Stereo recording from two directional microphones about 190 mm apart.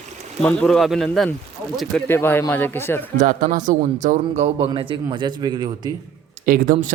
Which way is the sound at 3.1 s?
45° right (ahead or behind).